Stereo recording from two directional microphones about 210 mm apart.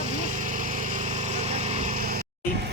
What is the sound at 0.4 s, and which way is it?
Vehicle, 40° right (ahead or behind).